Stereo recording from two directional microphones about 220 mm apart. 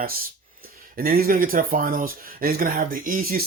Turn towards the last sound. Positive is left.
turn(degrees=-40)  # may be behind; listen again after turning